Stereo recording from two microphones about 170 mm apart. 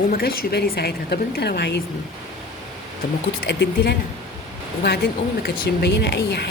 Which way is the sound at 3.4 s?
80° left.